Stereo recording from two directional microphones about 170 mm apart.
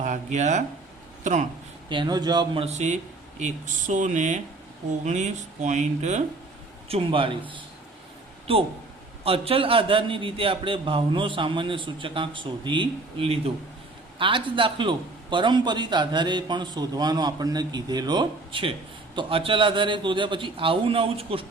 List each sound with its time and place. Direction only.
0.0 s speech: 45° right (ahead or behind)
1.9 s a man's voice: 25° right (ahead or behind)
2.6 s a man's voice: 45° right (ahead or behind)